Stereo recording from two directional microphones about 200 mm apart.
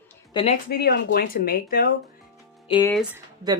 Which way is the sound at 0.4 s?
25° left (ahead or behind).